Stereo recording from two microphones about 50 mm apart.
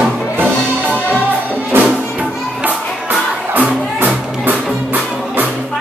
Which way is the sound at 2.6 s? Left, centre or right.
Right.